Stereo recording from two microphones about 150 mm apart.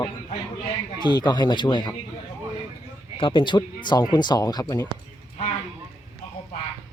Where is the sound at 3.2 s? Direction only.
35° left (ahead or behind).